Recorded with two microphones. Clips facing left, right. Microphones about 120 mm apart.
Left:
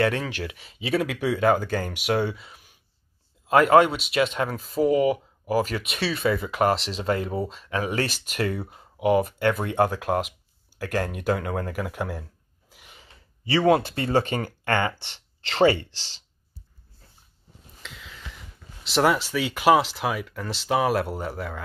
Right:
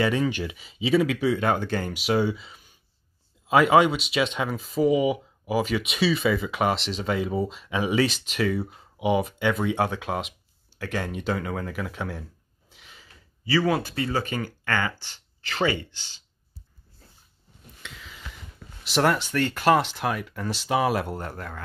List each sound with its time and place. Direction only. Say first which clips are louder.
0.0 s speech: right 1 dB; centre (ahead or behind)
13.0 s a sound: right 1 dB; 25° left (ahead or behind)
13.9 s speech: left 4 dB; 35° left (ahead or behind)
15.0 s speech: left 2 dB; 65° left (ahead or behind)
15.4 s speech: left 6 dB; 30° left (ahead or behind)
17.8 s a sound: left 1 dB; centre (ahead or behind)
18.9 s speech: left 1 dB; centre (ahead or behind)